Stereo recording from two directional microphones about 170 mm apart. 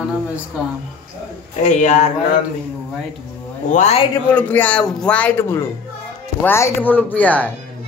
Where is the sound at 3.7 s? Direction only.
40° left (ahead or behind).